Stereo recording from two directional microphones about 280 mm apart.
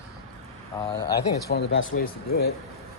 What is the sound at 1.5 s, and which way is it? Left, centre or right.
Speech, left.